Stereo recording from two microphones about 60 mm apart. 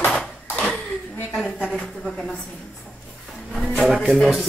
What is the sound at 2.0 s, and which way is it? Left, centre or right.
Music, centre.